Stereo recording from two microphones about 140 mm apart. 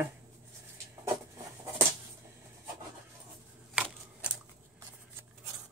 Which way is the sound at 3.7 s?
10° right (ahead or behind).